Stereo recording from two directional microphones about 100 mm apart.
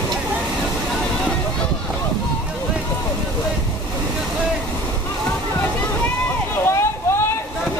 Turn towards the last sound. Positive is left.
turn(degrees=25)  # may be behind; listen again after turning